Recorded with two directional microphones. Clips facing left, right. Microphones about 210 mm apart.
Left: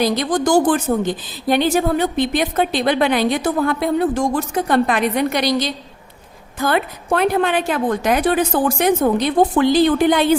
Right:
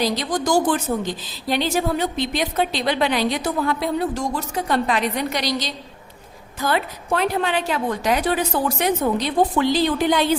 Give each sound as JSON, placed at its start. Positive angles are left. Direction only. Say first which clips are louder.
{"t": 0.0, "sound": "a woman's voice", "louder": "left 5 dB", "side_deg": 50}